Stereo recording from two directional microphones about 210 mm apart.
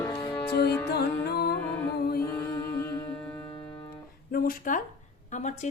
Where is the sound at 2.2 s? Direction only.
10° left (ahead or behind).